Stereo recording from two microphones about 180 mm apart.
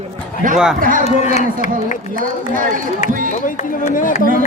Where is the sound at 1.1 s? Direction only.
35° left (ahead or behind).